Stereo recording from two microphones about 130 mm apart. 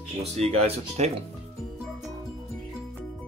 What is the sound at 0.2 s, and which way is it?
Speech, 55° right (ahead or behind).